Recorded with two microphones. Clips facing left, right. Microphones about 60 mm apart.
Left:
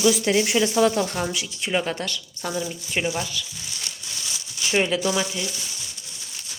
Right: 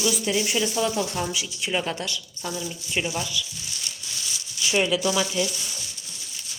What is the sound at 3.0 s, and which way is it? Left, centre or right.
Speech, left.